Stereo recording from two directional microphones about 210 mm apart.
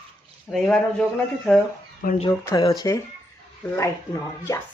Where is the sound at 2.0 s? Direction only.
40° left (ahead or behind).